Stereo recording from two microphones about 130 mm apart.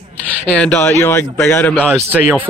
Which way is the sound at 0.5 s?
10° left (ahead or behind).